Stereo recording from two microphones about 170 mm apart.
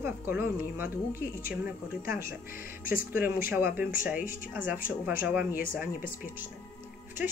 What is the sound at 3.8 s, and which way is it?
A woman's voice, 55° left (ahead or behind).